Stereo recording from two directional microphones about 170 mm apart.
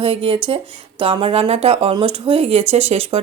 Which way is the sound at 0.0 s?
30° right (ahead or behind).